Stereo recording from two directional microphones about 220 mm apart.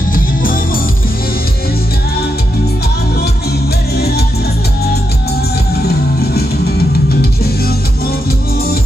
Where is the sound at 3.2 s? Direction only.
45° left (ahead or behind).